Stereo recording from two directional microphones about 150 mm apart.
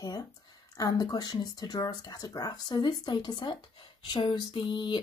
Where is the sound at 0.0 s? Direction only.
25° left (ahead or behind).